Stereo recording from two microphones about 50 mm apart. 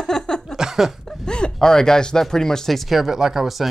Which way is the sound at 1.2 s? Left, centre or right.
Centre.